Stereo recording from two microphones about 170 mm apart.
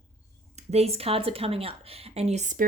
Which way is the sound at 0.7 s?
35° right (ahead or behind).